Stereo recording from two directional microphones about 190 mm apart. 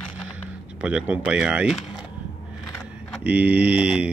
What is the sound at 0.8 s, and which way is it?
Speech, 5° right (ahead or behind).